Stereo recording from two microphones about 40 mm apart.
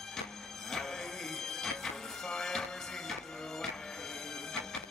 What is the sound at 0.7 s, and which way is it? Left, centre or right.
Music, centre.